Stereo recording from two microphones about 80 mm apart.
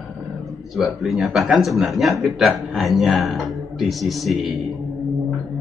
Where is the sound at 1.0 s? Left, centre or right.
Centre.